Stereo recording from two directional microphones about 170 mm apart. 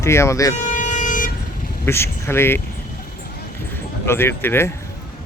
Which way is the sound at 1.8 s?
15° left (ahead or behind).